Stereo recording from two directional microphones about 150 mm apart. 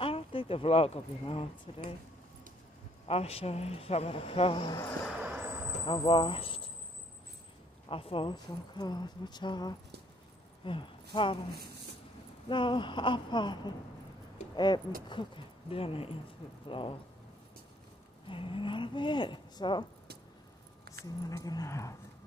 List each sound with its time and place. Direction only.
0.0 s speech: 35° left (ahead or behind)
3.1 s speech: 40° left (ahead or behind)
5.2 s vehicle: 10° right (ahead or behind)
5.9 s speech: 35° left (ahead or behind)
7.9 s speech: 40° left (ahead or behind)
12.4 s speech: 30° left (ahead or behind)
18.3 s speech: 35° left (ahead or behind)
21.3 s speech: 25° left (ahead or behind)